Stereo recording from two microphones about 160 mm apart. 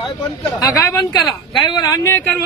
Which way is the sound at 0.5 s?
25° left (ahead or behind).